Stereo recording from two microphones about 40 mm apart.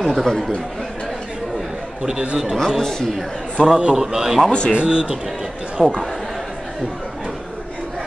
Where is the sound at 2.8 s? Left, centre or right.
Centre.